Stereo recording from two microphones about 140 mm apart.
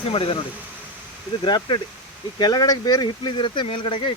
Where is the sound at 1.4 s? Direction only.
30° left (ahead or behind).